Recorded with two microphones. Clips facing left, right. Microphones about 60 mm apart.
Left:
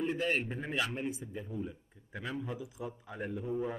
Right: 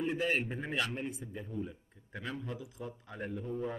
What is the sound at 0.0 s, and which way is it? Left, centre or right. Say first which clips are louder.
A man's voice: even; centre.